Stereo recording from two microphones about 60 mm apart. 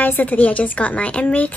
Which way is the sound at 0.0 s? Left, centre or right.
Left.